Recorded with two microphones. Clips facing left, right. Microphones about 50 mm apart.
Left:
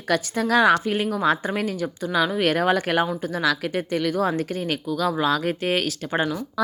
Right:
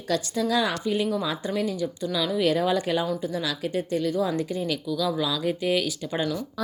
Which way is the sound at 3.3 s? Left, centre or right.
Left.